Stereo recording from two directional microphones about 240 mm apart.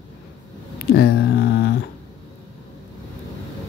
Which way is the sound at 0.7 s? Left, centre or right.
Left.